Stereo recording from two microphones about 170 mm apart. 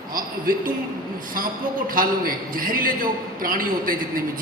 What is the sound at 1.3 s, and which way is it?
A man's voice, 55° right (ahead or behind).